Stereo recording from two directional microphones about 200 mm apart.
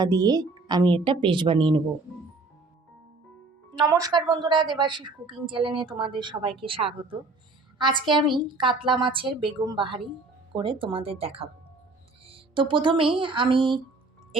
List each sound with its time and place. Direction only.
0.0 s a woman's voice: 20° right (ahead or behind)
3.8 s a woman's voice: 15° right (ahead or behind)